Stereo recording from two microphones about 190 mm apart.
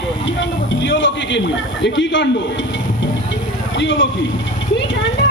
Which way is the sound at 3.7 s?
75° left (ahead or behind).